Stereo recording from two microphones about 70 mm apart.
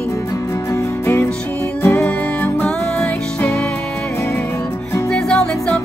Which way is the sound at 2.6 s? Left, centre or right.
Centre.